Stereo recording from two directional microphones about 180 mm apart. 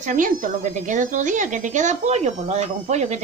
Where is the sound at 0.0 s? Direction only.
45° right (ahead or behind).